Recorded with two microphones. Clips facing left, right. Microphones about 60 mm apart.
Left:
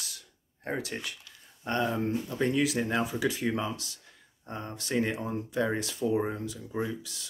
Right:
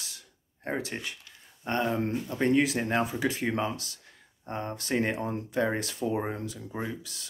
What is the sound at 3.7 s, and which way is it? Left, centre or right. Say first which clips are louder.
Speech: right 1 dB; right.